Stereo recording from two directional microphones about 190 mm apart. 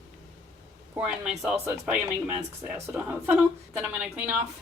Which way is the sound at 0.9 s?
5° right (ahead or behind).